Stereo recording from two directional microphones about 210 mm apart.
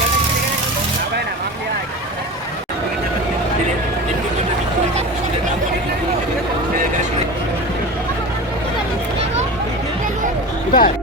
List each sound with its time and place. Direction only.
10.7 s music: 40° left (ahead or behind)